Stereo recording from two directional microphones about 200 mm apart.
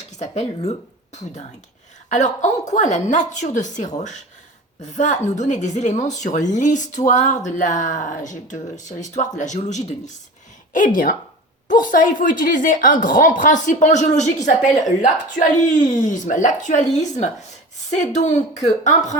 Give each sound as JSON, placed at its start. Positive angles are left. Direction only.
{"t": 0.2, "sound": "a woman's voice", "side_deg": 35}